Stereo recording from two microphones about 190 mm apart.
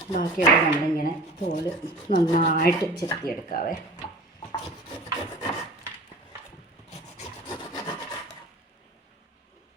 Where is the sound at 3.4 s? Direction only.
45° left (ahead or behind).